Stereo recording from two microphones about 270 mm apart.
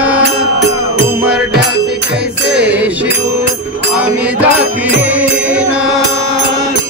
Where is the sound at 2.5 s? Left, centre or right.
Centre.